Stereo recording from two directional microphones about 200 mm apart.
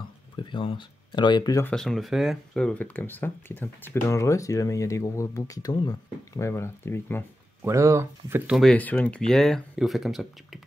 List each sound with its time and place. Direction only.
0.4 s speech: 25° left (ahead or behind)
1.7 s speech: centre (ahead or behind)
7.6 s speech: 15° right (ahead or behind)
8.5 s speech: 5° left (ahead or behind)